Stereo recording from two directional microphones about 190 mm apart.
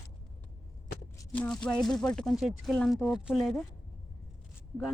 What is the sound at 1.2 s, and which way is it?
Speech, 5° left (ahead or behind).